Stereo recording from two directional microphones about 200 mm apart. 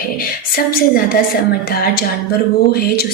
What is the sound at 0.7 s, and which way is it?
Speech, 45° left (ahead or behind).